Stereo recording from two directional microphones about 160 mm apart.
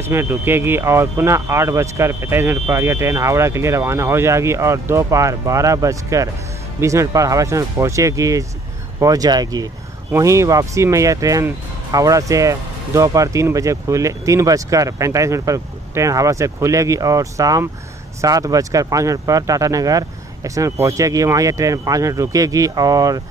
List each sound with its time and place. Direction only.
0.0 s speech: 15° right (ahead or behind)